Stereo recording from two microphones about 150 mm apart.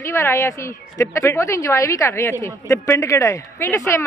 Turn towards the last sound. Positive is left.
turn(degrees=20)  # may be behind; listen again after turning